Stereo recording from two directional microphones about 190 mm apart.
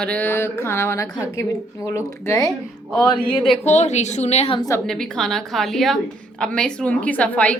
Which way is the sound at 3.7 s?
35° left (ahead or behind).